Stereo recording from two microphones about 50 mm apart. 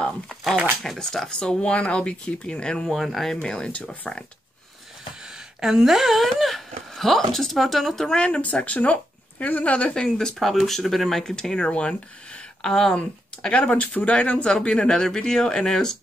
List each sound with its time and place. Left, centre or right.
0.3 s a sound: centre
0.8 s speech: centre
3.0 s speech: centre
3.3 s speech: centre
5.2 s speech: centre
8.3 s speech: left
10.0 s speech: centre
10.4 s speech: centre; by 12.0 s left
12.6 s speech: centre
12.9 s speech: left